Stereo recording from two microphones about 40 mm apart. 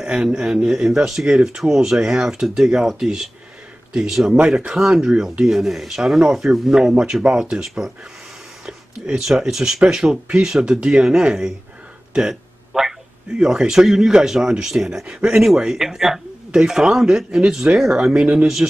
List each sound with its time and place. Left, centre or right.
0.0 s speech: centre
4.6 s speech: right
8.6 s speech: centre
12.1 s a sound: centre
13.4 s speech: centre